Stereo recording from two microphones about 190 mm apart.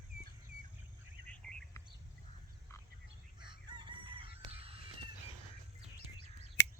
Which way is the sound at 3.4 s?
25° right (ahead or behind).